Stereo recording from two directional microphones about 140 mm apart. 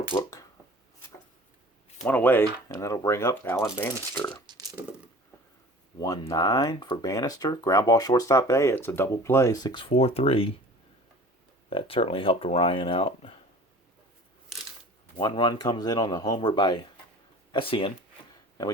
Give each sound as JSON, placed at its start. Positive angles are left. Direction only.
{"t": 0.2, "sound": "a sound", "side_deg": 25}
{"t": 2.0, "sound": "speech", "side_deg": 10}
{"t": 4.4, "sound": "a sound", "side_deg": -25}
{"t": 6.0, "sound": "speech", "side_deg": 25}
{"t": 11.7, "sound": "speech", "side_deg": 40}
{"t": 15.2, "sound": "speech", "side_deg": 35}